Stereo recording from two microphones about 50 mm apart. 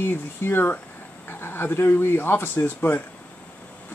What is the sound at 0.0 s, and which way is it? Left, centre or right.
Speech, left.